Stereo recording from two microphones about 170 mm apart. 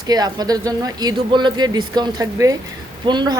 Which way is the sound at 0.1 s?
25° right (ahead or behind).